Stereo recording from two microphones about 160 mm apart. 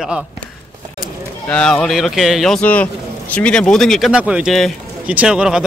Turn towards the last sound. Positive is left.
turn(degrees=-5)  # may be behind; listen again after turning